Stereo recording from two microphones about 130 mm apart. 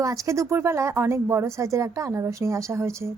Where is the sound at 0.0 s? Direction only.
25° right (ahead or behind).